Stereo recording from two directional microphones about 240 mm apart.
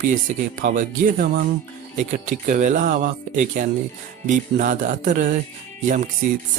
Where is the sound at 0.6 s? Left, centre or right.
Right.